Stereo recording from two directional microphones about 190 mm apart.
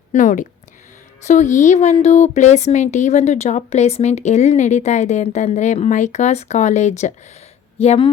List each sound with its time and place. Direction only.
0.1 s a woman's voice: 40° left (ahead or behind)